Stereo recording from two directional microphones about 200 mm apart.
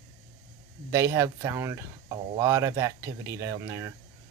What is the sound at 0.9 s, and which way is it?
Speech, 15° right (ahead or behind).